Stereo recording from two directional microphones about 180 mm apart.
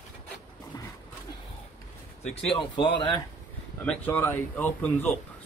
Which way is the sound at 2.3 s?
30° left (ahead or behind).